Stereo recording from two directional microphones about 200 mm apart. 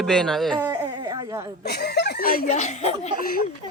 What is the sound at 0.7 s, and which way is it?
Speech, 20° right (ahead or behind).